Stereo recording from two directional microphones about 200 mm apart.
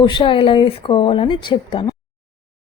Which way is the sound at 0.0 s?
25° left (ahead or behind).